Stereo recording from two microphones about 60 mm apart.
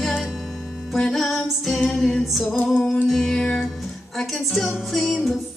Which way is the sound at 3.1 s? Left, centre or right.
Centre.